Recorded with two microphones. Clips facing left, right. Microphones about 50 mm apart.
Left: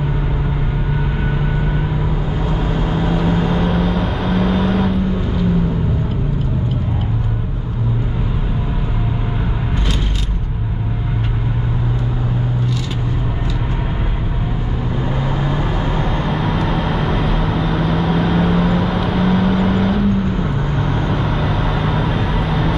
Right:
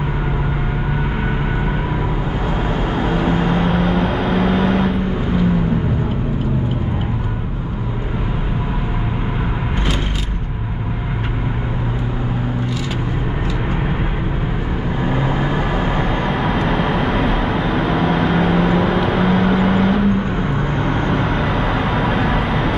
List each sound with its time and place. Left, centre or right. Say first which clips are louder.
2.7 s vehicle: even; right
3.5 s vehicle: right 1 dB; centre
15.0 s vehicle: right 3 dB; right
16.3 s vehicle: right 1 dB; centre
20.2 s vehicle: even; right
21.1 s vehicle: right 1 dB; centre